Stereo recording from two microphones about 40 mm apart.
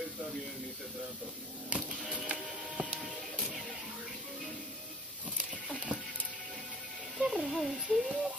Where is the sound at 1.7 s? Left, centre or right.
Right.